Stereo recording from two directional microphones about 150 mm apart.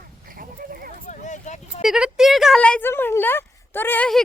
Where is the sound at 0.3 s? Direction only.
75° right (ahead or behind).